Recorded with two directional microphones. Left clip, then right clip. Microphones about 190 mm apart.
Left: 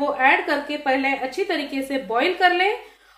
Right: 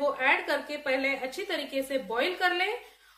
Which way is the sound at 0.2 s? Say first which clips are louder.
Left 8 dB; 25° left (ahead or behind).